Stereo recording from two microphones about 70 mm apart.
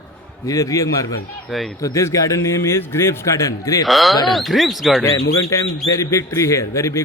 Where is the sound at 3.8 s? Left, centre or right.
Centre.